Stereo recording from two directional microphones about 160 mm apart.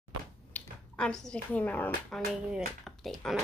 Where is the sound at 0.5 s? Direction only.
10° left (ahead or behind).